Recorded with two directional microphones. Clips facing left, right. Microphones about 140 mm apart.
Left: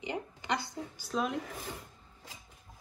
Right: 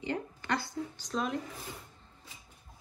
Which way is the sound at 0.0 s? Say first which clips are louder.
Right 2 dB; 15° left (ahead or behind).